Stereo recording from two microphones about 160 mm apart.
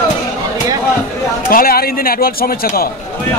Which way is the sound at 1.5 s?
65° left (ahead or behind).